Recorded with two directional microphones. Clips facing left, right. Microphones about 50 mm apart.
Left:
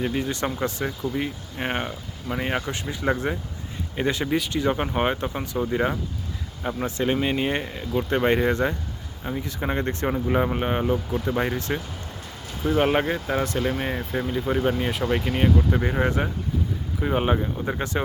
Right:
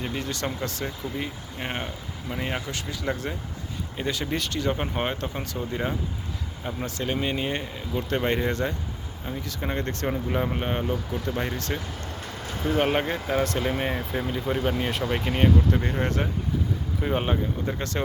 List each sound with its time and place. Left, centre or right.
0.0 s speech: centre
4.3 s speech: centre
6.8 s speech: left
10.9 s speech: left
12.6 s speech: centre
15.5 s speech: centre
17.0 s speech: centre
17.3 s speech: centre